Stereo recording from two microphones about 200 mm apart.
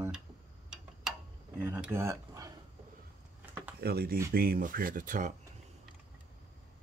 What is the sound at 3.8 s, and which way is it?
Speech, 50° right (ahead or behind).